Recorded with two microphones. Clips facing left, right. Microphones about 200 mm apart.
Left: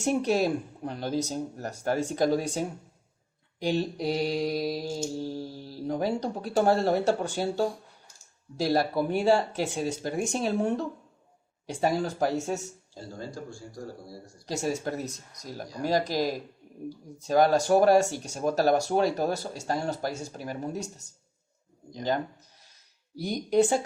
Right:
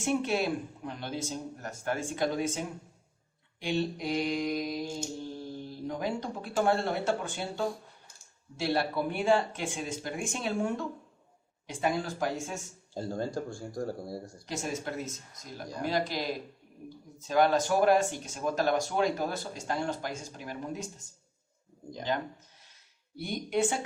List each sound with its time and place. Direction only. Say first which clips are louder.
0.0 s mantra: left 4 dB; 40° left (ahead or behind)
12.9 s speech: right 7 dB; 55° right (ahead or behind)
14.4 s mantra: left 6 dB; 40° left (ahead or behind)
23.1 s mantra: left 7 dB; 40° left (ahead or behind)